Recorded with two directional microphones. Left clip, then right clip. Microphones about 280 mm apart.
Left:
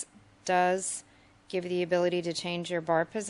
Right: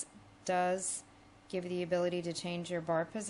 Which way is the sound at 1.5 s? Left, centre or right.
Centre.